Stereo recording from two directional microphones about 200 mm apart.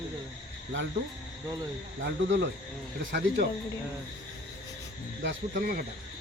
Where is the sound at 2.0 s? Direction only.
65° right (ahead or behind).